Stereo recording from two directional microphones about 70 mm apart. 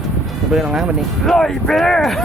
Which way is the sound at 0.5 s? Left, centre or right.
Centre.